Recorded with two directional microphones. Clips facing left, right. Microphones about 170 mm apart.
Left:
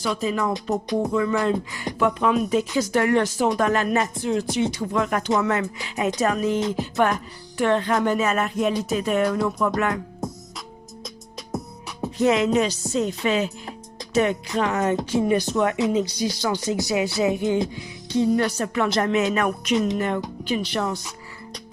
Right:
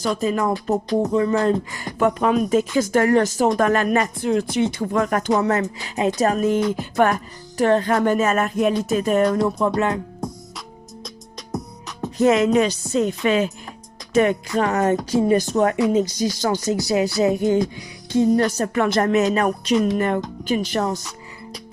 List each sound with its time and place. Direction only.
0.0 s speech: 50° right (ahead or behind)
9.4 s music: 30° right (ahead or behind)
10.2 s music: 5° left (ahead or behind)
11.5 s music: 10° left (ahead or behind)
12.2 s speech: 50° right (ahead or behind)
20.0 s speech: 50° right (ahead or behind)